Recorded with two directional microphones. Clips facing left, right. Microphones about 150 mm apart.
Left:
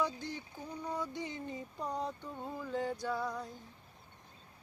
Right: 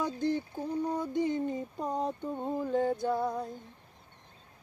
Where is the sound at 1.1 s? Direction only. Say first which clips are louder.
Right 11 dB; 50° right (ahead or behind).